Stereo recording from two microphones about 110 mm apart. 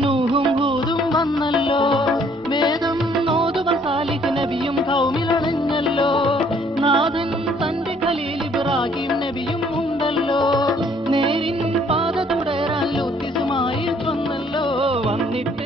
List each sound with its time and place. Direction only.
0.0 s music: 55° right (ahead or behind)
1.6 s music: 50° left (ahead or behind)
3.3 s music: 55° right (ahead or behind)
5.9 s music: 50° left (ahead or behind)
6.8 s music: 50° right (ahead or behind)
11.1 s music: 55° right (ahead or behind)